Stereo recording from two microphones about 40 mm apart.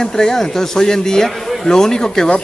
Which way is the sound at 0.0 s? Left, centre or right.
Centre.